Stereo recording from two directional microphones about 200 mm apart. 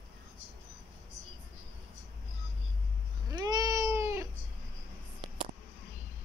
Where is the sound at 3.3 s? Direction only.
20° right (ahead or behind).